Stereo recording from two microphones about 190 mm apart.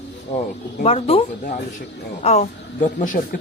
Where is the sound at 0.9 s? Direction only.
30° left (ahead or behind).